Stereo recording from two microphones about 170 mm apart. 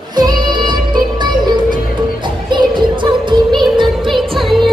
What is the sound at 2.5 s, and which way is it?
Music, 25° right (ahead or behind).